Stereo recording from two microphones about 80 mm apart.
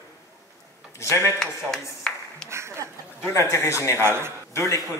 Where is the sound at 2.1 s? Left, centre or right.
Centre.